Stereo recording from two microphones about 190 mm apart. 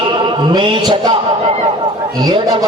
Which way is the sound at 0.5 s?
25° right (ahead or behind).